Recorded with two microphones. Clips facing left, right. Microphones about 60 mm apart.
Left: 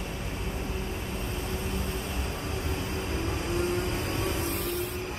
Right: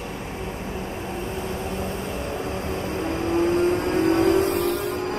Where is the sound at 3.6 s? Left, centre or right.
Right.